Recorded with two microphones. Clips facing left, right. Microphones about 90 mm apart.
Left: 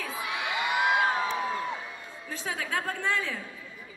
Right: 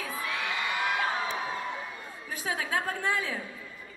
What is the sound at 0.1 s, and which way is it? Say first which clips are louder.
Whoop: left 1 dB; 20° left (ahead or behind).